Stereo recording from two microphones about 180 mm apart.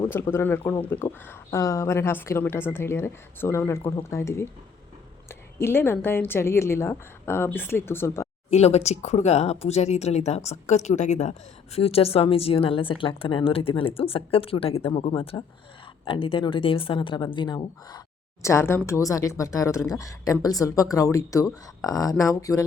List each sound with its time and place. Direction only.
0.0 s a woman's voice: 15° left (ahead or behind)
8.4 s speech: 35° left (ahead or behind)
18.4 s a woman's voice: 15° left (ahead or behind)